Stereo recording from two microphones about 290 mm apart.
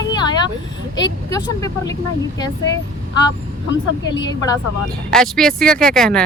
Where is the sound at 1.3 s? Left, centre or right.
Centre.